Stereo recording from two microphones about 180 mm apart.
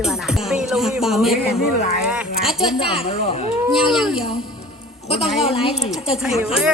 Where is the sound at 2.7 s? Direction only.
30° left (ahead or behind).